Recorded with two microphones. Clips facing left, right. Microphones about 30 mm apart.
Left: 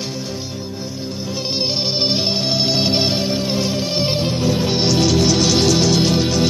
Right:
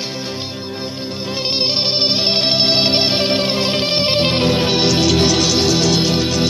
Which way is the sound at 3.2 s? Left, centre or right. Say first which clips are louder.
Right 3 dB; right.